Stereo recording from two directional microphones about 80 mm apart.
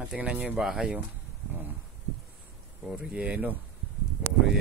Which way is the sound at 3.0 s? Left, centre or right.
Centre.